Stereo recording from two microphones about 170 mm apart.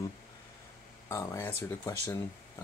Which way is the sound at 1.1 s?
20° left (ahead or behind).